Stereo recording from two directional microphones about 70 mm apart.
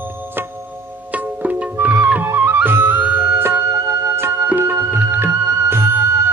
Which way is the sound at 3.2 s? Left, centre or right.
Right.